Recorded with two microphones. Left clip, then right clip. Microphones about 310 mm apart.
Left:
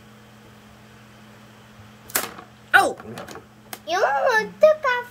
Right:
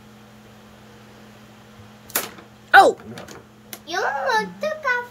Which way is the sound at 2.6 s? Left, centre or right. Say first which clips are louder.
Right 5 dB; centre.